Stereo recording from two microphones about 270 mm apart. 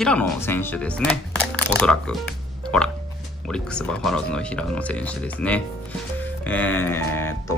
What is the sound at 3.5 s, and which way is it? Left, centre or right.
Speech, centre.